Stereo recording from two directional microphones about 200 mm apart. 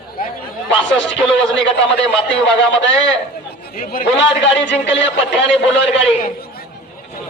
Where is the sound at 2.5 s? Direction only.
65° left (ahead or behind).